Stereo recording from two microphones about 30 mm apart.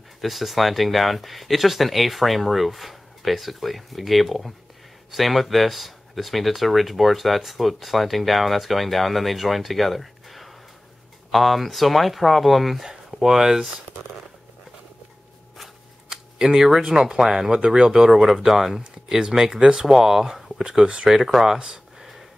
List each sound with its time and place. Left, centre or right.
0.2 s speech: centre
13.2 s speech: centre
16.1 s camera: centre
16.9 s speech: right
17.5 s speech: right
17.7 s speech: centre
18.1 s speech: centre; by 19.9 s right
19.9 s speech: centre
20.8 s speech: right